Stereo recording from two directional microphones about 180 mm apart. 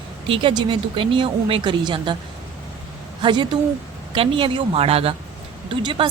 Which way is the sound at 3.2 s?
25° right (ahead or behind).